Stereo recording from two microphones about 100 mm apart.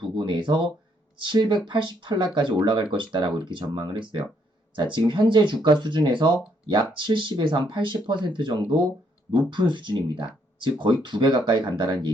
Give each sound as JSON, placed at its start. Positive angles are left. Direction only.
{"t": 0.0, "sound": "speech", "side_deg": -55}